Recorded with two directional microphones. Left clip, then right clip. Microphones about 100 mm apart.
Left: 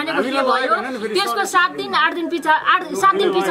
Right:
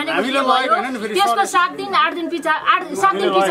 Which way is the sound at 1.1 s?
15° left (ahead or behind).